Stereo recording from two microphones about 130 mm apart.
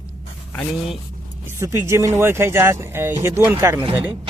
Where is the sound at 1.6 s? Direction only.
20° right (ahead or behind).